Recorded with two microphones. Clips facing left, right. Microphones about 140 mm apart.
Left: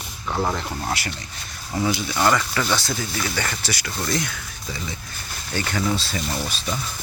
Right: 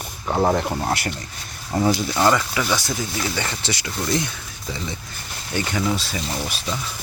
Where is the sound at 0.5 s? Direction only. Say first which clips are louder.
Right 7 dB; 55° right (ahead or behind).